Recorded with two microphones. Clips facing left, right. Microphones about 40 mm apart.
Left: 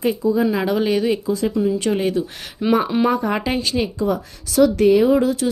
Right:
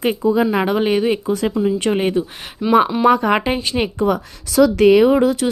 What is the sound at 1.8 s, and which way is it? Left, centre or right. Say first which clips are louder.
Speech: right 2 dB; right.